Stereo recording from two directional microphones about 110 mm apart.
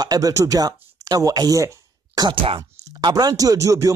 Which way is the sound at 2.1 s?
45° right (ahead or behind).